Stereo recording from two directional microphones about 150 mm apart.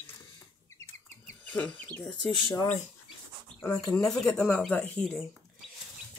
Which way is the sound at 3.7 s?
25° left (ahead or behind).